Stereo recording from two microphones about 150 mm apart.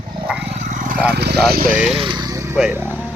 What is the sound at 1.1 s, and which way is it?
Lawn mower, 90° right.